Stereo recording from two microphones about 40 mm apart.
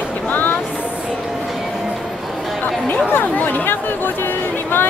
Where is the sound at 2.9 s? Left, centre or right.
Left.